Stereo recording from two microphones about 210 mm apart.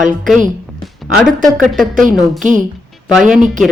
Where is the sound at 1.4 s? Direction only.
Centre (ahead or behind).